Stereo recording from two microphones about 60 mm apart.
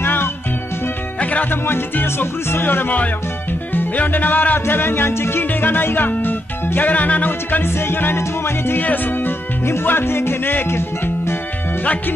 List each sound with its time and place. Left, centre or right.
0.0 s music: left
1.7 s music: left